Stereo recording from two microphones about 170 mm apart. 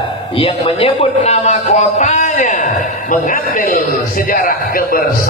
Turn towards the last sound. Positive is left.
turn(degrees=60)  # may be behind; listen again after turning